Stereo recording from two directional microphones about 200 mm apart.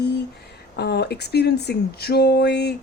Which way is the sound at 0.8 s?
55° left (ahead or behind).